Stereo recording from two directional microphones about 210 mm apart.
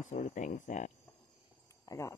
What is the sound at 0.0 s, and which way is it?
Speech, 35° left (ahead or behind).